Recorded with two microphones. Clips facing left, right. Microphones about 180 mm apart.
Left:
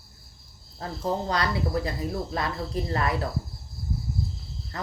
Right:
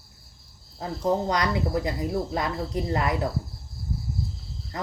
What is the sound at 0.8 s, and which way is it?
Speech, 20° right (ahead or behind).